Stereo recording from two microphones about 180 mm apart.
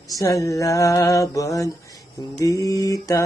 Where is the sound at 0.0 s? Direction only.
20° left (ahead or behind).